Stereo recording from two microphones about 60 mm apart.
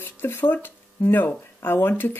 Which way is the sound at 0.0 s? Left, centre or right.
Left.